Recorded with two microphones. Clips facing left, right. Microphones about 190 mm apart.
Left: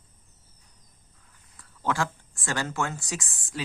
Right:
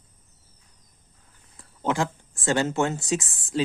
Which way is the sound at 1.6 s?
20° right (ahead or behind).